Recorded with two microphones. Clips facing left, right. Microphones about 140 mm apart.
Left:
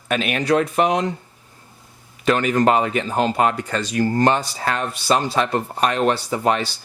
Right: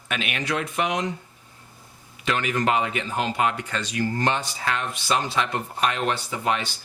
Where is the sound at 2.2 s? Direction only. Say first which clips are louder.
Left 7 dB; 40° left (ahead or behind).